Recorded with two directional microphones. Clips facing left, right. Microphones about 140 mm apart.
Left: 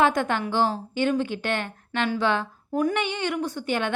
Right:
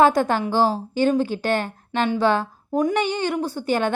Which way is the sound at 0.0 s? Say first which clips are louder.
Right 5 dB; 35° right (ahead or behind).